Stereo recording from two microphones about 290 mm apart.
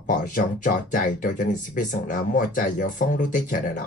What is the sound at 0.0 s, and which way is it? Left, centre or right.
Speech, left.